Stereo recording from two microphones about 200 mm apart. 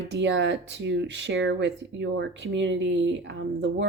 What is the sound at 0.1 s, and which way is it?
Speech, 65° right (ahead or behind).